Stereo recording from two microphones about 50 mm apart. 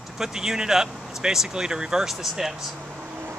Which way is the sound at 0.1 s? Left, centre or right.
Centre.